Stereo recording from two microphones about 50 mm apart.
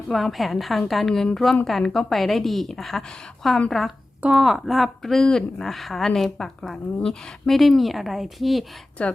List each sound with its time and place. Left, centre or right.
0.1 s a woman's voice: centre
9.0 s speech: left